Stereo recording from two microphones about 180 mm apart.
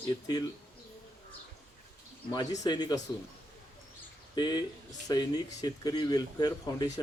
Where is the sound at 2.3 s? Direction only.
25° left (ahead or behind).